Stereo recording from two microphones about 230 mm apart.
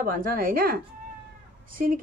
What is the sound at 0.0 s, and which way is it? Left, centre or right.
A woman's voice, right.